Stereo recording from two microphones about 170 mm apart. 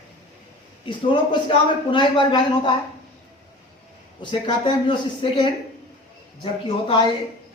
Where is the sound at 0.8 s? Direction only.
30° left (ahead or behind).